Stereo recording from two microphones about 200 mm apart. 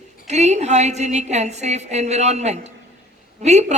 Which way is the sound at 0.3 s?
35° right (ahead or behind).